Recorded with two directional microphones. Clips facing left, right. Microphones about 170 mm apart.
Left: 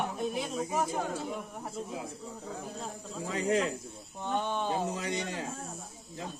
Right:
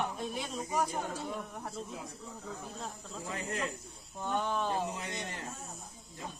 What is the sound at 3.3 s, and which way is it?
Speech, 90° left.